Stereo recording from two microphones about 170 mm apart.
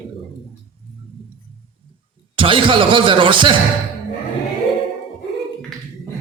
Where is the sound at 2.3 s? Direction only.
30° right (ahead or behind).